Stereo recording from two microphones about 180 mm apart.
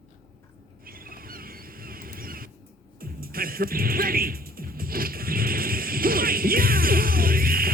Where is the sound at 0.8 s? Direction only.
55° right (ahead or behind).